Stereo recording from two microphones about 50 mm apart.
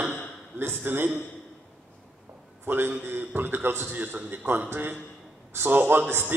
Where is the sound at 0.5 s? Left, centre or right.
Right.